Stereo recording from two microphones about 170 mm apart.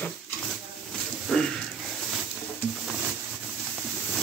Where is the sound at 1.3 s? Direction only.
5° left (ahead or behind).